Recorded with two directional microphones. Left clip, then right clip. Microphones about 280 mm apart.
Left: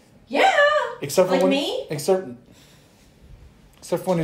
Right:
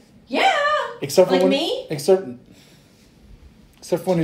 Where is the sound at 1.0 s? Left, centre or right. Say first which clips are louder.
Right 3 dB; centre.